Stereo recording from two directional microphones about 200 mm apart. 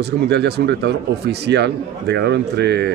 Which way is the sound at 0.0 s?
55° right (ahead or behind).